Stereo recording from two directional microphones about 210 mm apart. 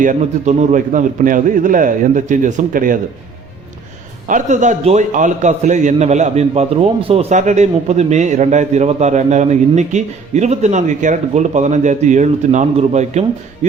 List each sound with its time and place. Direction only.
0.0 s a man's voice: 35° right (ahead or behind)
4.3 s a man's voice: 35° right (ahead or behind)